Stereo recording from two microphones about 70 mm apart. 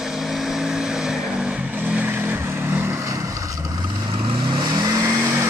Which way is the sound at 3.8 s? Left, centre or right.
Right.